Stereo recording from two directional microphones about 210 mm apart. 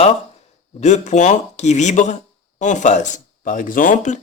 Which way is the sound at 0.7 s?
35° left (ahead or behind).